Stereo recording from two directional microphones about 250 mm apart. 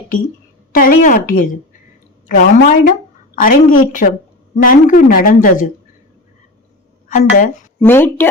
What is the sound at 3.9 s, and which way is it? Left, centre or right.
Speech, left.